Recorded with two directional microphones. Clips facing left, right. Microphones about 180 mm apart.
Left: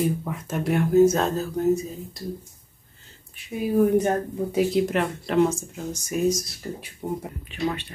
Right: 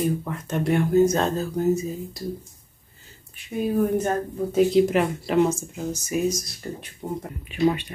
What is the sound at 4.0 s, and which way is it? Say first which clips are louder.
Speech: left 2 dB; 15° left (ahead or behind).